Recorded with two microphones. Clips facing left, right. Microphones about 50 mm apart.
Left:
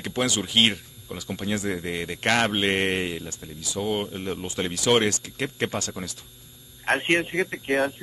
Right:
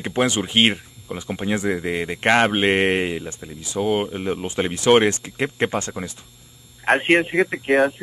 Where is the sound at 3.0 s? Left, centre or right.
Right.